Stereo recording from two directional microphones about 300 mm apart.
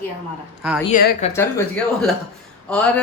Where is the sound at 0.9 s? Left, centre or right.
Left.